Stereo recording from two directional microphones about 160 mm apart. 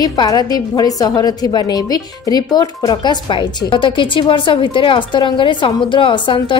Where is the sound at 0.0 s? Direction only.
25° left (ahead or behind).